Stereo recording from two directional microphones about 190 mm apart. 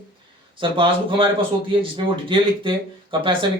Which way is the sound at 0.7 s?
25° right (ahead or behind).